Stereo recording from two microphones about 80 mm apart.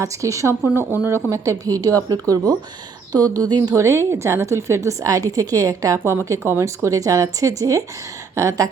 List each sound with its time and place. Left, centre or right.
0.0 s a woman's voice: right
3.8 s a woman's voice: right